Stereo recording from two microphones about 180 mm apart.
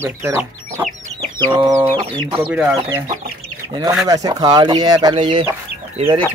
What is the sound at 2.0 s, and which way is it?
Speech, 30° right (ahead or behind).